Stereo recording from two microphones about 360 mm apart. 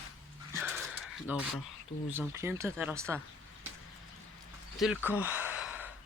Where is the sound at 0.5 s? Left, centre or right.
Centre.